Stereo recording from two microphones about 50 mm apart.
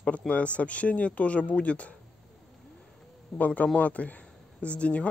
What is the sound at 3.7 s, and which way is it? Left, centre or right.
Speech, left.